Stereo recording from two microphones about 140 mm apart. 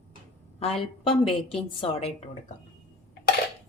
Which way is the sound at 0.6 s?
40° left (ahead or behind).